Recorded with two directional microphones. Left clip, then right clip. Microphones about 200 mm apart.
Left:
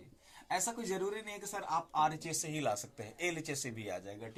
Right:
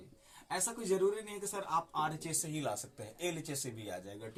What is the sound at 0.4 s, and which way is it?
Speech, 15° left (ahead or behind).